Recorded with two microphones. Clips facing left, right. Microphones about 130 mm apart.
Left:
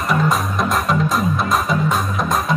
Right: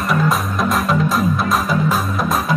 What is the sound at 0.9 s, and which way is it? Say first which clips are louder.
Music: right 1 dB; centre (ahead or behind).